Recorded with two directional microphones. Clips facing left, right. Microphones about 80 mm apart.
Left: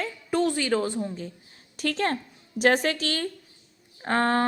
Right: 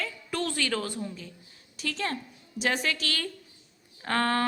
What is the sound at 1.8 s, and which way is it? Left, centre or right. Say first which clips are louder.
A woman's voice: left 6 dB; left.